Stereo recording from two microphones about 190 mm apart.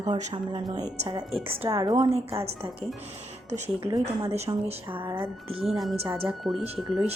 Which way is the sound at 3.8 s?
20° right (ahead or behind).